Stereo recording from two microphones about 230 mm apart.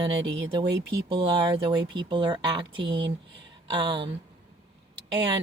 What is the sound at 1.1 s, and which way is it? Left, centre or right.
Speech, right.